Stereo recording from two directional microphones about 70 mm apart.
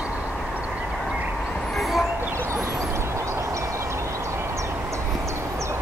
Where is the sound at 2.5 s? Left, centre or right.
Right.